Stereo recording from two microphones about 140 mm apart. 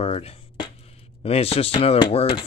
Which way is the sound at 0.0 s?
45° left (ahead or behind).